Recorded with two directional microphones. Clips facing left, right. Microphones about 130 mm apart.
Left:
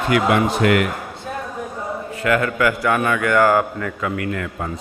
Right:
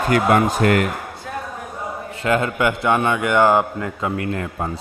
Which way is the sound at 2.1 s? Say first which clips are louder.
Even; 30° right (ahead or behind).